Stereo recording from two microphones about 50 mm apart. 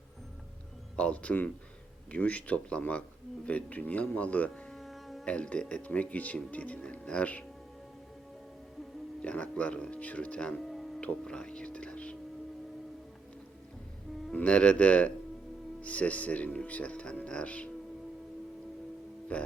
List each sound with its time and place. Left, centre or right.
0.9 s speech: left
4.7 s music: centre
5.2 s speech: left
9.2 s speech: left
10.6 s music: centre
11.0 s speech: centre
14.3 s speech: left
19.3 s speech: left